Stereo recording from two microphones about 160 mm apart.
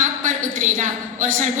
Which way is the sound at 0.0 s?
50° right (ahead or behind).